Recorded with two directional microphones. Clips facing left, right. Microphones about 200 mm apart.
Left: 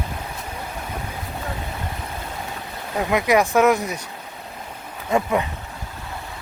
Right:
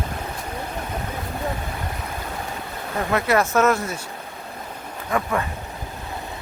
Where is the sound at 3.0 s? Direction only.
15° left (ahead or behind).